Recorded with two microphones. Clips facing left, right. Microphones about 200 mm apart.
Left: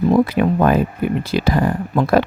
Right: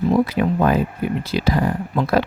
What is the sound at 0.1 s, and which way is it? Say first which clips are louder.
Speech: left 3 dB; 55° left (ahead or behind).